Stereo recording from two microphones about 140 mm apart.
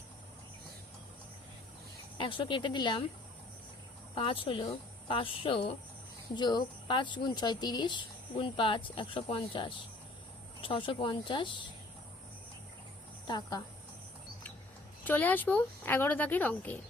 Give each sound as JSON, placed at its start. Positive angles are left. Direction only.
{"t": 2.1, "sound": "speech", "side_deg": 35}
{"t": 4.1, "sound": "speech", "side_deg": 40}
{"t": 13.2, "sound": "speech", "side_deg": 30}
{"t": 15.0, "sound": "speech", "side_deg": 10}